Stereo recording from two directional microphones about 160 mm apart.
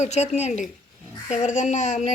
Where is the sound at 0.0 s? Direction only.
45° left (ahead or behind).